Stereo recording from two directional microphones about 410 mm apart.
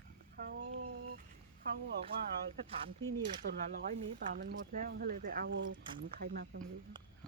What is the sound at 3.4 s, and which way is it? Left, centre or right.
Speech, right.